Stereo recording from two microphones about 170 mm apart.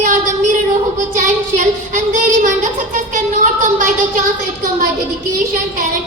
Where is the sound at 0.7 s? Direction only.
50° right (ahead or behind).